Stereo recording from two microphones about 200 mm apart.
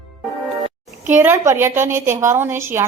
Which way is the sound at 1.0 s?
10° right (ahead or behind).